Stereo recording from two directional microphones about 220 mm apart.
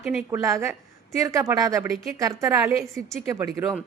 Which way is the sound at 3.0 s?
Centre (ahead or behind).